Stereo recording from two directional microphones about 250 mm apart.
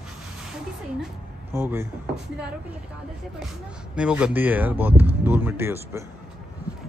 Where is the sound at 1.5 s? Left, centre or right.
Centre.